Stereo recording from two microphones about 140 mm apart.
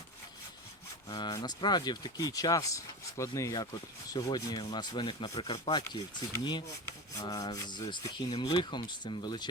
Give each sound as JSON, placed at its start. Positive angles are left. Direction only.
{"t": 1.0, "sound": "speech", "side_deg": 30}